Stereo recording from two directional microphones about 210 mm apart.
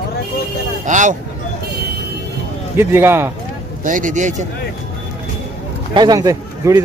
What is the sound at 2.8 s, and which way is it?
Speech, 10° right (ahead or behind).